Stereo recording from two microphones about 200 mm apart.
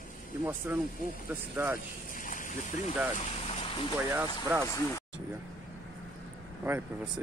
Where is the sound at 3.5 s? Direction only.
25° left (ahead or behind).